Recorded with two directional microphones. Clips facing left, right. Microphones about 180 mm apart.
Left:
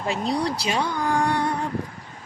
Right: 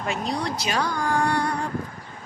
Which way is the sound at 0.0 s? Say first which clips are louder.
Left 3 dB; 35° left (ahead or behind).